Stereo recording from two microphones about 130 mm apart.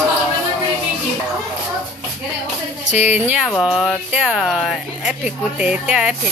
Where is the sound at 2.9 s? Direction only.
10° right (ahead or behind).